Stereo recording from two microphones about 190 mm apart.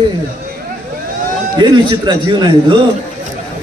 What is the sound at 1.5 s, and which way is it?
A man's voice, 25° right (ahead or behind).